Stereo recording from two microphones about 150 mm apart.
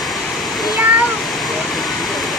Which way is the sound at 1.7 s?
Centre (ahead or behind).